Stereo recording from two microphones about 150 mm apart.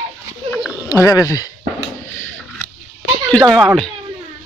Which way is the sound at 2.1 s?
15° left (ahead or behind).